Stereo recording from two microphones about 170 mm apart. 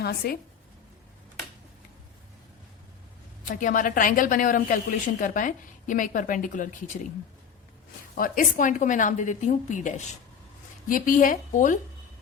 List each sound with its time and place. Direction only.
0.0 s a woman's voice: 70° left (ahead or behind)
3.4 s a woman's voice: 50° left (ahead or behind)
8.1 s a woman's voice: 55° left (ahead or behind)